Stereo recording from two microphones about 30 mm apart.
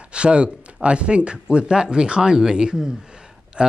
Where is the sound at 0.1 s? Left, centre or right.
Right.